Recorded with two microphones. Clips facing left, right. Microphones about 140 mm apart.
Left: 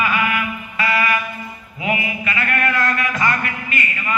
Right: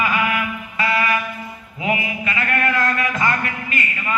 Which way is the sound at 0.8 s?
25° right (ahead or behind).